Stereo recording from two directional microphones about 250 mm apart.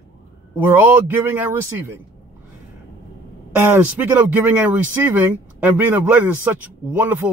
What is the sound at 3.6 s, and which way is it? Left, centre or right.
Speech, centre.